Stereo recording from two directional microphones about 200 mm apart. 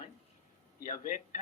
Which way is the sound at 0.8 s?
40° left (ahead or behind).